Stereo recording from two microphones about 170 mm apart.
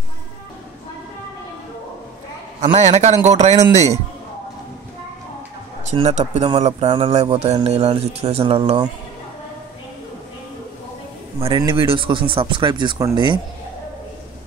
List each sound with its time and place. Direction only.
2.6 s speech: 40° right (ahead or behind)
5.9 s speech: 40° right (ahead or behind)
11.3 s speech: 30° right (ahead or behind)